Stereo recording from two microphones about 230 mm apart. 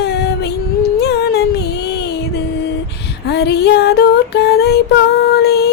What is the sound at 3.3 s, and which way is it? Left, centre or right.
Female singing, left.